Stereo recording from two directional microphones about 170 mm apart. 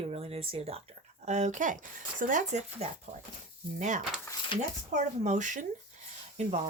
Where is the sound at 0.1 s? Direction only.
35° right (ahead or behind).